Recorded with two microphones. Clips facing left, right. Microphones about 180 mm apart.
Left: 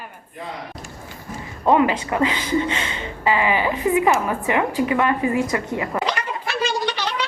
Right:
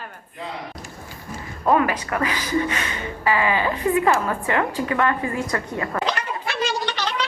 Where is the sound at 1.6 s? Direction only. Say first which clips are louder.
Left 2 dB; 20° left (ahead or behind).